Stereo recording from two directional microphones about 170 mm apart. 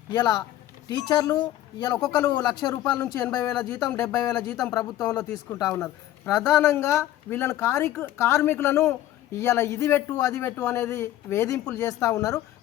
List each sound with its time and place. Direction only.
0.1 s speech: 25° left (ahead or behind)
3.0 s speech: 5° left (ahead or behind)
5.1 s speech: 20° left (ahead or behind)